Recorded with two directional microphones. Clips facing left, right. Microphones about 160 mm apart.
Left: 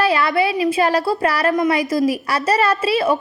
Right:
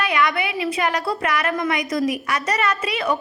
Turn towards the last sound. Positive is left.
turn(degrees=30)  # may be behind; listen again after turning